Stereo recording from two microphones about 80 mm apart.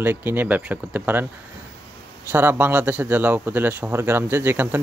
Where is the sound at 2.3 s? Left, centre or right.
Right.